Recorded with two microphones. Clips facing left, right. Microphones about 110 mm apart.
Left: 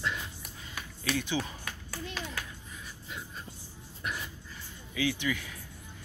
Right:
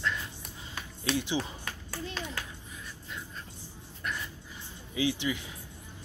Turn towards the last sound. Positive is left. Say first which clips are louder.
# right 1 dB
turn(degrees=-25)  # may be behind; listen again after turning